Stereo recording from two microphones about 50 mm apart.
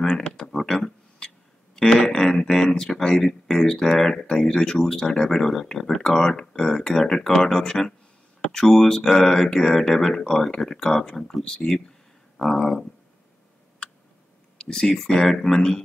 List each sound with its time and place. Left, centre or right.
0.0 s a sound: centre
2.1 s speech: centre
12.4 s speech: centre
14.6 s speech: centre